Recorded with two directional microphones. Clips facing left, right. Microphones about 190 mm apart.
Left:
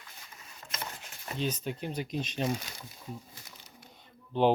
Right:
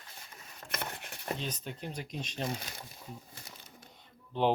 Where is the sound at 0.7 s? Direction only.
60° right (ahead or behind).